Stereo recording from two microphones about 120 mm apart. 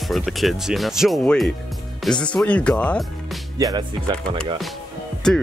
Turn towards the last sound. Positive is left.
turn(degrees=5)  # may be behind; listen again after turning